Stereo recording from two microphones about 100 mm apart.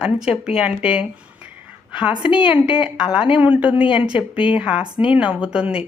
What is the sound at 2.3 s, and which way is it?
Speech, 55° left (ahead or behind).